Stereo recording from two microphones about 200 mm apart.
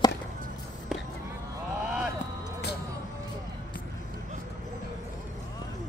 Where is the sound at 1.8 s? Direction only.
5° right (ahead or behind).